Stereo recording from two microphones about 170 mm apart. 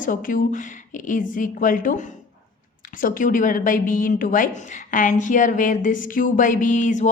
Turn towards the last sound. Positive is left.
turn(degrees=45)  # may be behind; listen again after turning